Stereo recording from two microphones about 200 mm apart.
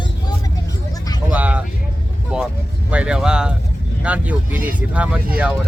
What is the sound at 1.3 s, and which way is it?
Speech, 5° right (ahead or behind).